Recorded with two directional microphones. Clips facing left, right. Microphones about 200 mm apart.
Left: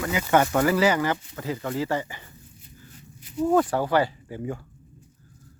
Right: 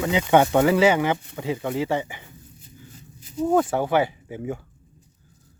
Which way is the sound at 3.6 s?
20° right (ahead or behind).